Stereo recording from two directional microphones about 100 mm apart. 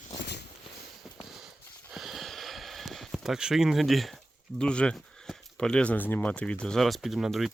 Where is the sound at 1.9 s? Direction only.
Centre (ahead or behind).